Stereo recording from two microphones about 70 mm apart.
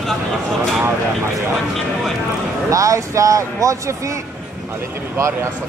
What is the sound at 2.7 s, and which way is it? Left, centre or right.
Speech, right.